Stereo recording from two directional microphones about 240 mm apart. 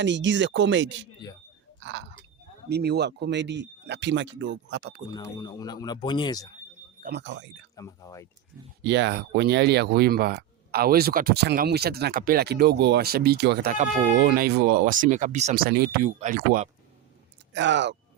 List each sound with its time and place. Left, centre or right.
0.0 s speech: right
1.8 s chewing: right
2.6 s speech: right
5.1 s speech: centre
7.0 s speech: right
7.8 s speech: centre
8.8 s speech: right
17.5 s speech: right